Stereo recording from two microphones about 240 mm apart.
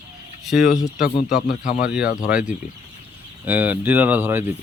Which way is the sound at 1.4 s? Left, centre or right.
Left.